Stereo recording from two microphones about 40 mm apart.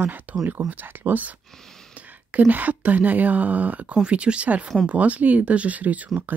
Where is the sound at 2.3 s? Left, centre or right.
Right.